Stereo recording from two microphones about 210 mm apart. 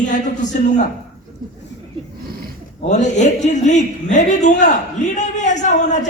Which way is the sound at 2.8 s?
35° left (ahead or behind).